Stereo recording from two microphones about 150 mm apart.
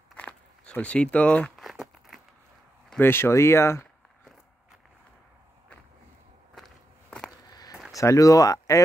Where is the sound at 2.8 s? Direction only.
15° left (ahead or behind).